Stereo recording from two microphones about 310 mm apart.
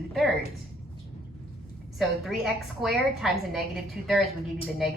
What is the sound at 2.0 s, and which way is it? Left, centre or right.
A woman's voice, centre.